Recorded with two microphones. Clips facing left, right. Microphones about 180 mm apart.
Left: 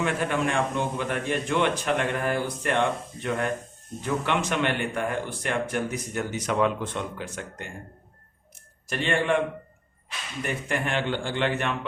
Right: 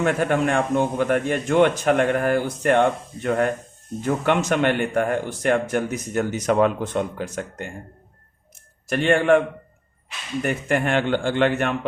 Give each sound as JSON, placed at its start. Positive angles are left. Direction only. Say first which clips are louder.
{"t": 0.0, "sound": "speech", "louder": "right 5 dB", "side_deg": -50}
{"t": 8.9, "sound": "speech", "louder": "right 8 dB", "side_deg": -50}
{"t": 10.4, "sound": "speech", "louder": "right 6 dB", "side_deg": -50}